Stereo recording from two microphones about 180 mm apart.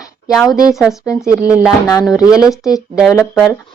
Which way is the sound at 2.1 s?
20° left (ahead or behind).